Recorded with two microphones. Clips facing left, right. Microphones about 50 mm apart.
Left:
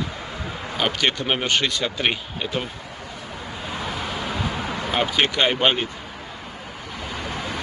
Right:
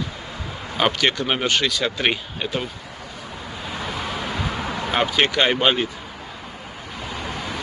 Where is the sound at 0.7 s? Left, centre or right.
Centre.